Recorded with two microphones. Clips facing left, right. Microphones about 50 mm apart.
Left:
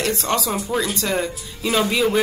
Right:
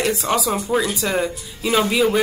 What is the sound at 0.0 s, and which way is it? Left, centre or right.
Speech, centre.